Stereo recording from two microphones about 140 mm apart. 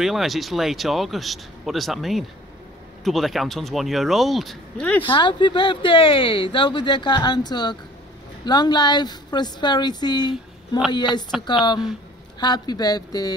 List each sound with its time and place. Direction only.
0.0 s speech: centre (ahead or behind)
5.0 s speech: 35° left (ahead or behind)